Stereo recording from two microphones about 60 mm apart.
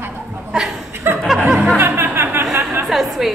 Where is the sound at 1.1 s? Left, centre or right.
Right.